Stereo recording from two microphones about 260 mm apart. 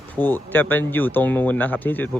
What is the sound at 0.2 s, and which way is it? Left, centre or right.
A man's voice, centre.